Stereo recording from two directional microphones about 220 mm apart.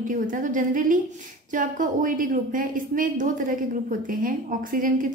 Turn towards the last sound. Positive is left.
turn(degrees=-40)  # may be behind; listen again after turning